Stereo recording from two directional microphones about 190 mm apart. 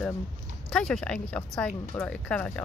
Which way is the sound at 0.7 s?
5° left (ahead or behind).